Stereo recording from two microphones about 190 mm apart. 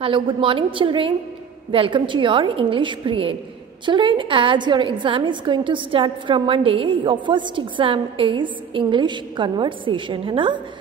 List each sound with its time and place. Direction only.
0.0 s a woman's voice: 25° right (ahead or behind)